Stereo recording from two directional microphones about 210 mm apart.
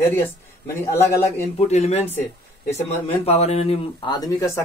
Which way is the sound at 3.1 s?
30° left (ahead or behind).